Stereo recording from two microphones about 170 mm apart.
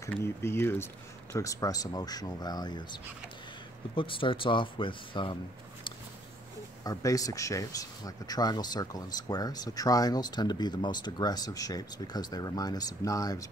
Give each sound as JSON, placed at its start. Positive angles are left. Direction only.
{"t": 0.1, "sound": "speech", "side_deg": 15}
{"t": 6.8, "sound": "speech", "side_deg": 20}